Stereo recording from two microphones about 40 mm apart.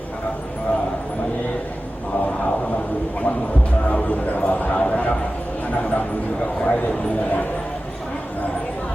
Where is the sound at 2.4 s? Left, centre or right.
Left.